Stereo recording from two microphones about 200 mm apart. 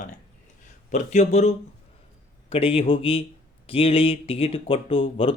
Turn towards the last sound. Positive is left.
turn(degrees=25)  # may be behind; listen again after turning